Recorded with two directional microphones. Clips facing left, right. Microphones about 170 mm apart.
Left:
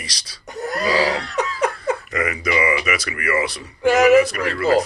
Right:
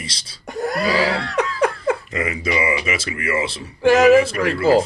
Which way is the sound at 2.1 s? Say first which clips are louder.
Even; 25° right (ahead or behind).